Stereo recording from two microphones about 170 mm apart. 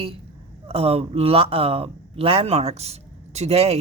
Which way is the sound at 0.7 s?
35° right (ahead or behind).